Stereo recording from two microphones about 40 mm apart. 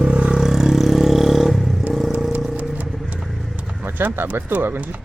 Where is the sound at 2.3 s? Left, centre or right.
Right.